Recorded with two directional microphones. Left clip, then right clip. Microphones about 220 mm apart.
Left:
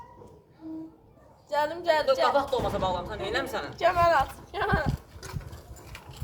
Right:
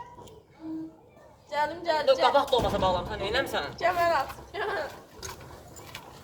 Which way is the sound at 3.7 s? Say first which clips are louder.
Left 3 dB; 40° left (ahead or behind).